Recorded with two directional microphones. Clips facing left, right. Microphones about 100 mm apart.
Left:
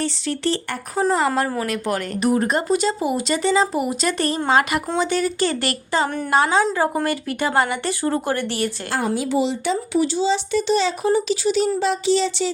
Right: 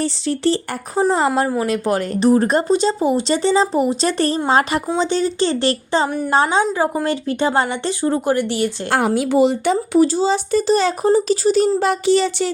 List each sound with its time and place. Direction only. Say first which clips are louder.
0.0 s speech: right 4 dB; 35° right (ahead or behind)
6.1 s a woman's voice: right 4 dB; 10° right (ahead or behind)
6.3 s speech: right 1 dB; 25° right (ahead or behind)
8.9 s speech: right 6 dB; 65° right (ahead or behind); by 11.7 s 45° right (ahead or behind)
11.8 s speech: right 3 dB; 55° right (ahead or behind)